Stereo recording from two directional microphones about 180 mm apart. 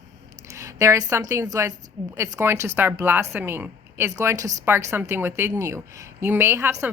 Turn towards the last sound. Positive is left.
turn(degrees=-15)  # may be behind; listen again after turning